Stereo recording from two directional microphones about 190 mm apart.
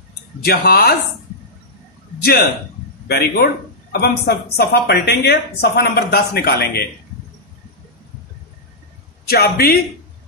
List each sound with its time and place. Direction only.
0.4 s a woman's voice: 55° left (ahead or behind)
3.1 s a woman's voice: 55° left (ahead or behind)
9.3 s a man's voice: 55° left (ahead or behind)